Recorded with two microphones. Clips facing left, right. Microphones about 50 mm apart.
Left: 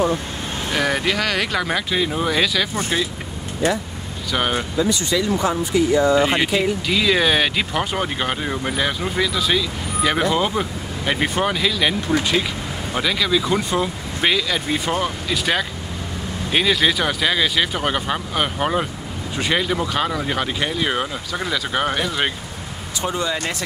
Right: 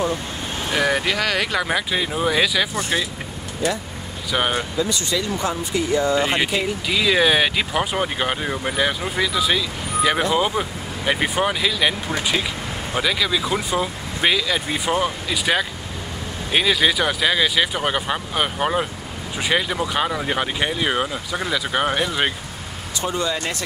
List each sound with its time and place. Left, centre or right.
0.7 s speech: centre
4.3 s speech: centre
6.1 s speech: centre
23.0 s speech: centre